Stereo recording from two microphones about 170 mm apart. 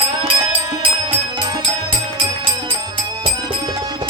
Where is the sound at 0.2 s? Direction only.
25° right (ahead or behind).